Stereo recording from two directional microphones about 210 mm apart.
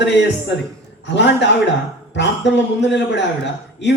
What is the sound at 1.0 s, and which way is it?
Speech, 55° left (ahead or behind).